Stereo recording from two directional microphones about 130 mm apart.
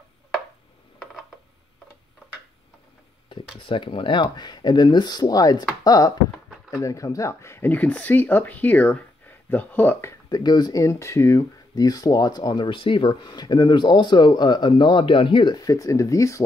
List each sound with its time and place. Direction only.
3.5 s speech: 40° left (ahead or behind); by 10.1 s 15° left (ahead or behind)
10.3 s speech: 30° left (ahead or behind)